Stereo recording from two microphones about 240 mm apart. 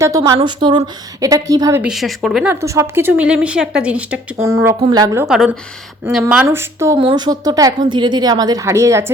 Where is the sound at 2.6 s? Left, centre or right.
Centre.